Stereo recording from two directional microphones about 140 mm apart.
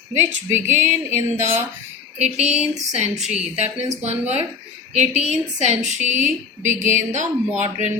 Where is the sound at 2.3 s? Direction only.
50° right (ahead or behind).